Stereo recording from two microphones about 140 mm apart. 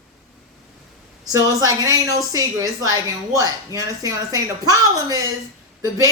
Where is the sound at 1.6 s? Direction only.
25° right (ahead or behind).